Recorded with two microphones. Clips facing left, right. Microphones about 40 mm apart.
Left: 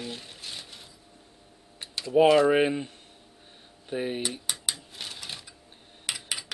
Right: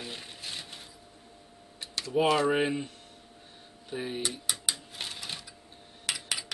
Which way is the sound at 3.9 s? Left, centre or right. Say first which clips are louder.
Left 4 dB; centre.